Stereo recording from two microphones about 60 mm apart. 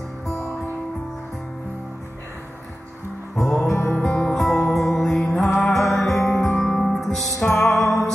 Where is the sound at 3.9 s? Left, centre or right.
Centre.